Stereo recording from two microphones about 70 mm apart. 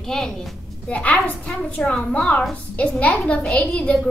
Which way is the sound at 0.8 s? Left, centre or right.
Centre.